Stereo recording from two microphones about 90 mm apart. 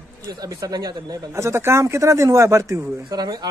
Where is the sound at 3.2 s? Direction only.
50° right (ahead or behind).